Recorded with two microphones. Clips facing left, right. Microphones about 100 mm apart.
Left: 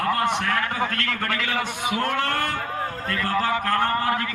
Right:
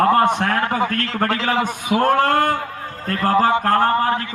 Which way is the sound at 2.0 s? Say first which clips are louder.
Right 10 dB; 40° right (ahead or behind).